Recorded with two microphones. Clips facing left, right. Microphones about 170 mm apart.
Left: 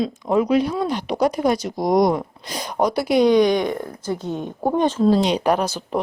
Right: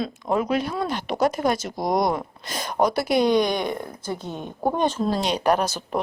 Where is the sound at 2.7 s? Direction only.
5° right (ahead or behind).